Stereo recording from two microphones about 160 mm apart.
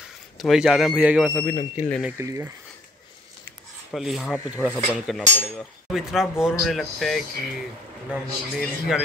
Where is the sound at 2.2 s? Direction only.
15° right (ahead or behind).